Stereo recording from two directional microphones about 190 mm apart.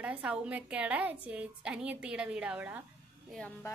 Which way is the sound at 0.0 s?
5° right (ahead or behind).